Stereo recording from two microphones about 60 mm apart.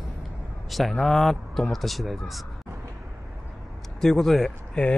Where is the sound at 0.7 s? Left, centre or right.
Centre.